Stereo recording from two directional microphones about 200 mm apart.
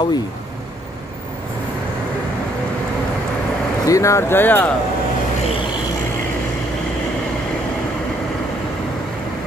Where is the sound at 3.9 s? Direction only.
15° left (ahead or behind).